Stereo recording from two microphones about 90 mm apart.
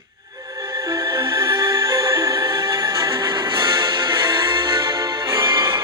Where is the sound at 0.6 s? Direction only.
70° right (ahead or behind).